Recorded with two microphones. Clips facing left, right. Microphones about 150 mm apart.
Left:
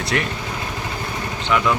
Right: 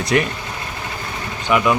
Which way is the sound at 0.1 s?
15° right (ahead or behind).